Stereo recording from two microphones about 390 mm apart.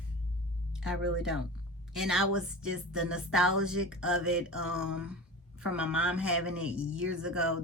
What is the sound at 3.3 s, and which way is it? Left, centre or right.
A woman's voice, centre.